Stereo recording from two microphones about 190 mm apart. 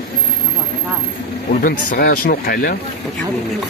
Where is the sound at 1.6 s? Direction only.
50° left (ahead or behind).